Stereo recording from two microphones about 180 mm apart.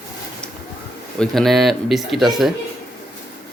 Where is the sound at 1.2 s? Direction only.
Centre (ahead or behind).